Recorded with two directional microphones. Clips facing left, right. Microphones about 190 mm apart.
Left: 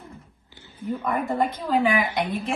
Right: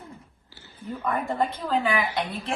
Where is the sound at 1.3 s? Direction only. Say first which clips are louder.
Left 3 dB; 15° left (ahead or behind).